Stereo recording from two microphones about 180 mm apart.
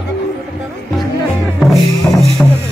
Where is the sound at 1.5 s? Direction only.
Centre (ahead or behind).